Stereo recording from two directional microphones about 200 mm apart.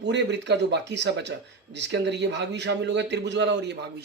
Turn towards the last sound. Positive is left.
turn(degrees=-60)  # may be behind; listen again after turning